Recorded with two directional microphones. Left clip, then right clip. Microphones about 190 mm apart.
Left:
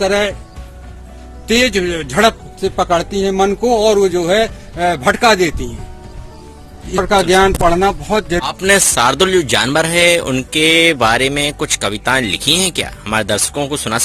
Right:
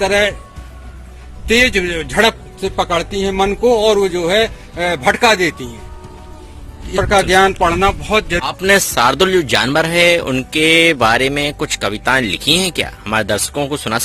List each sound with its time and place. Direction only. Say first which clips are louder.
1.5 s a man's voice: right 1 dB; 55° left (ahead or behind)
6.9 s a man's voice: even; 55° left (ahead or behind)
8.4 s speech: left 3 dB; centre (ahead or behind)